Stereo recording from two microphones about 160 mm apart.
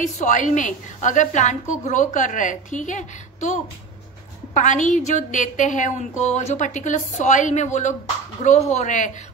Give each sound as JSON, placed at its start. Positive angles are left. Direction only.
{"t": 0.0, "sound": "a woman's voice", "side_deg": 50}
{"t": 4.6, "sound": "a woman's voice", "side_deg": 50}